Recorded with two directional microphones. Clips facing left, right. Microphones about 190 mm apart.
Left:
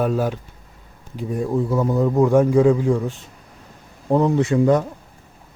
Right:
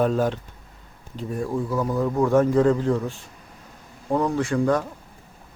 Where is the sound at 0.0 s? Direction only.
10° left (ahead or behind).